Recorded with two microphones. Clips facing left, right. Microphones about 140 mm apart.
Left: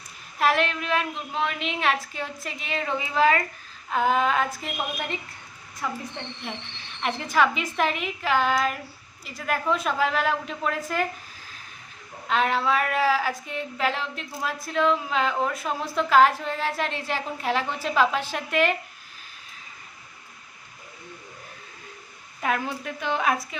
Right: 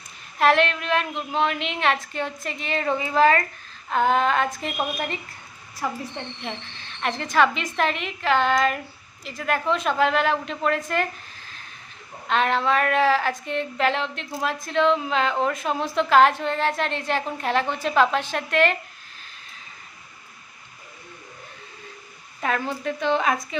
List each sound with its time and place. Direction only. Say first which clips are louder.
0.3 s a woman's voice: right 4 dB; 5° left (ahead or behind)
6.4 s a woman's voice: right 2 dB; 10° left (ahead or behind)
12.3 s a woman's voice: right 2 dB; 5° left (ahead or behind)
22.4 s a woman's voice: right 1 dB; 5° left (ahead or behind)